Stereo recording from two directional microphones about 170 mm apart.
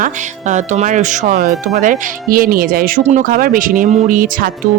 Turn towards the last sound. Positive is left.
turn(degrees=-55)  # may be behind; listen again after turning